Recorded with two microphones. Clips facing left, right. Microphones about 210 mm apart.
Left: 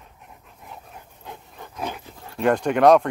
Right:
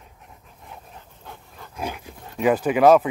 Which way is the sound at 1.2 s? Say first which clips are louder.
Left 3 dB; 20° left (ahead or behind).